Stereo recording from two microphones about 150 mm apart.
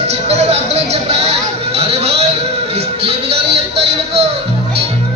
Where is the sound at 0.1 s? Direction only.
45° right (ahead or behind).